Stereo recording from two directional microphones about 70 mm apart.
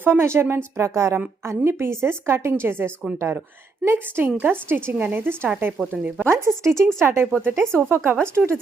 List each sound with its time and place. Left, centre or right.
0.0 s a woman's voice: right
6.2 s a woman's voice: right